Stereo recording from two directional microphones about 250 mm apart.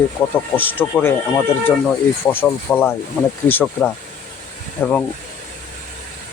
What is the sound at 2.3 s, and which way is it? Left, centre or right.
Speech, centre.